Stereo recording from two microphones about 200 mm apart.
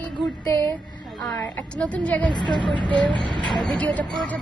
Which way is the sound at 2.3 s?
20° left (ahead or behind).